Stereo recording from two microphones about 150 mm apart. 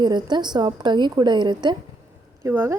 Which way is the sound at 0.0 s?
30° right (ahead or behind).